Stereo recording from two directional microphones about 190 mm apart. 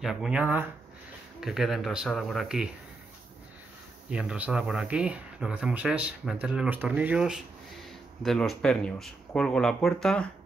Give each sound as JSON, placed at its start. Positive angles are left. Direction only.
{"t": 0.0, "sound": "speech", "side_deg": 0}
{"t": 4.1, "sound": "speech", "side_deg": -5}